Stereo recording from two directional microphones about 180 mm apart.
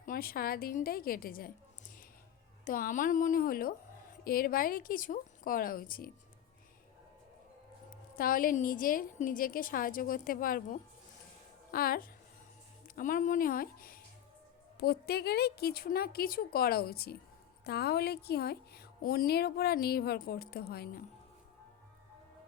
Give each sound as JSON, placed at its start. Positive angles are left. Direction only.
{"t": 0.0, "sound": "a woman's voice", "side_deg": 55}
{"t": 2.6, "sound": "a woman's voice", "side_deg": 50}
{"t": 7.9, "sound": "a woman's voice", "side_deg": 55}